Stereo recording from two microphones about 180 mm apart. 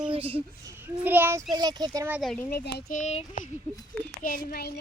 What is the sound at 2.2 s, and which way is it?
Speech, 5° left (ahead or behind).